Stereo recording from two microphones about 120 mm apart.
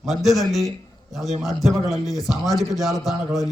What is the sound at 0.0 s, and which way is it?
A man's voice, centre (ahead or behind).